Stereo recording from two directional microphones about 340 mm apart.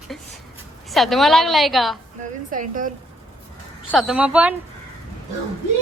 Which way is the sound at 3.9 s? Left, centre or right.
Centre.